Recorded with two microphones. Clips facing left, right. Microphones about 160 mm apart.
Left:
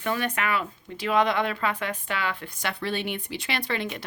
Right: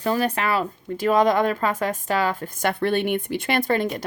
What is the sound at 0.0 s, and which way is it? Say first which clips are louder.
Speech: right 5 dB; 35° right (ahead or behind).